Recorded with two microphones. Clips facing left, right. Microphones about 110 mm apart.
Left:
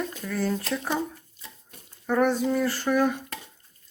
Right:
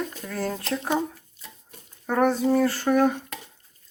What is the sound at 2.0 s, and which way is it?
Speech, 45° right (ahead or behind).